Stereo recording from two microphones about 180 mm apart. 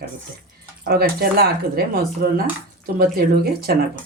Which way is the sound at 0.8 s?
60° right (ahead or behind).